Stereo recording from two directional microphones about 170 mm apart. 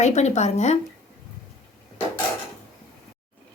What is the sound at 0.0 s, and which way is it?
Speech, 40° left (ahead or behind).